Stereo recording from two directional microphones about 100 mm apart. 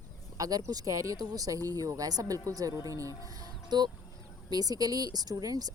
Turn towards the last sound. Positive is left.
turn(degrees=-40)  # may be behind; listen again after turning